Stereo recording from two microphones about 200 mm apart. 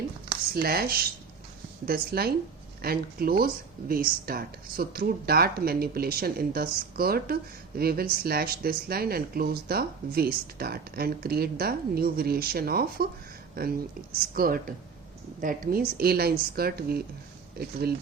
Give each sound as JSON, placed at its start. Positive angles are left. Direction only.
{"t": 0.3, "sound": "speech", "side_deg": -50}
{"t": 14.3, "sound": "speech", "side_deg": -45}